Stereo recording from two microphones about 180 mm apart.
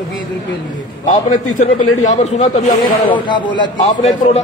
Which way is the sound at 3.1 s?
25° left (ahead or behind).